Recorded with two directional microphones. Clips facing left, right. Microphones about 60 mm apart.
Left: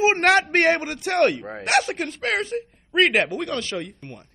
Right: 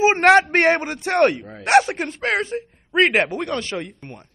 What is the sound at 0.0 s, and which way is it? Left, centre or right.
Speech, right.